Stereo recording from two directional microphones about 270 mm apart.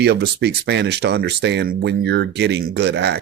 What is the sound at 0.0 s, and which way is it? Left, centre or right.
Speech, right.